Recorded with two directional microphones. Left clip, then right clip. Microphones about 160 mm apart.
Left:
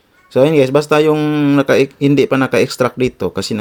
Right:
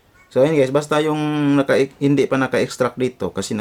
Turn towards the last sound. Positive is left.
turn(degrees=25)  # may be behind; listen again after turning